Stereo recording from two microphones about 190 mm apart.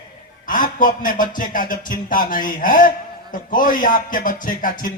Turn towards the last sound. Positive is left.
turn(degrees=45)  # may be behind; listen again after turning